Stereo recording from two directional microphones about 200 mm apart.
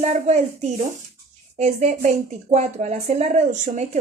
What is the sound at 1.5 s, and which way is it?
Speech, 35° right (ahead or behind).